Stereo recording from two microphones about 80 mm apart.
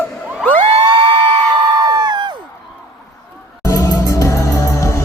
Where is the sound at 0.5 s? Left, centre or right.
Right.